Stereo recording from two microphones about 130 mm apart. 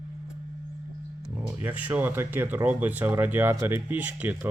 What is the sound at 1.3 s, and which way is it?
Speech, 15° right (ahead or behind).